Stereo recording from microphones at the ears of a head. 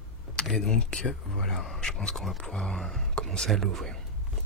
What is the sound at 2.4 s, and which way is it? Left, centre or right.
Speech, centre.